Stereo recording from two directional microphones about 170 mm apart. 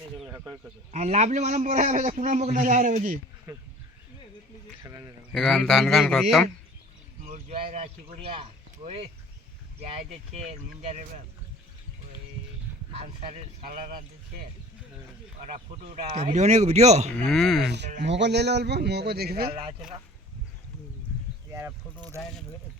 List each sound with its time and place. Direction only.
0.3 s speech: 15° right (ahead or behind)
0.9 s a man's voice: 40° right (ahead or behind)
4.8 s speech: 15° right (ahead or behind)
5.3 s speech: 5° left (ahead or behind)
7.3 s a man's voice: 45° right (ahead or behind)
7.5 s speech: 35° right (ahead or behind)
12.9 s speech: 35° right (ahead or behind)
13.7 s a man's voice: 55° right (ahead or behind)
15.4 s speech: 45° right (ahead or behind)
17.2 s speech: 5° left (ahead or behind)
17.7 s a man's voice: 90° right; by 19.5 s 65° right (ahead or behind)
22.2 s speech: centre (ahead or behind)